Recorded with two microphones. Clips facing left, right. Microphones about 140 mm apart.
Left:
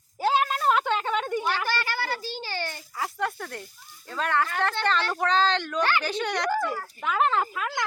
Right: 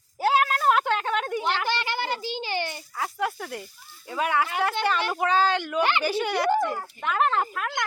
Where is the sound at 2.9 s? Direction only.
Centre (ahead or behind).